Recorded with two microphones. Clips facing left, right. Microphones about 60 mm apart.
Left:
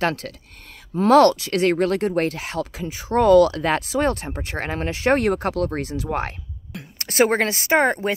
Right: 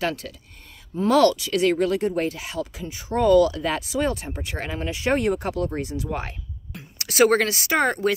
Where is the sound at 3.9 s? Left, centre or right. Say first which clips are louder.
Left 3 dB; left.